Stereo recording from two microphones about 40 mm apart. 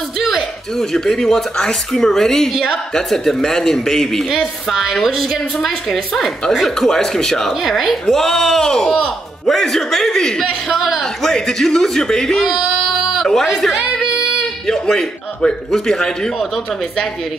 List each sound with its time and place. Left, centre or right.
0.3 s speech: centre
4.4 s a woman's voice: centre
6.9 s speech: centre
7.6 s speech: centre
10.8 s a woman's voice: centre
11.2 s a woman's voice: centre
14.7 s speech: centre